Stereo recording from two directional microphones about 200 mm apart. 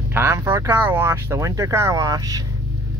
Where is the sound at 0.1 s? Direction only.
15° right (ahead or behind).